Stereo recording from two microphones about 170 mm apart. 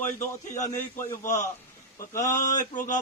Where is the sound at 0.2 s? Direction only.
45° left (ahead or behind).